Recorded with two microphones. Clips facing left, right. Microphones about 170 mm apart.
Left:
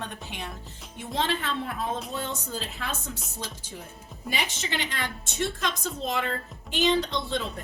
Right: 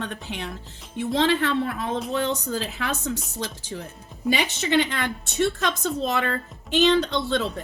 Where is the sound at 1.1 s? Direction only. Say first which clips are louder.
Right 7 dB; 80° right.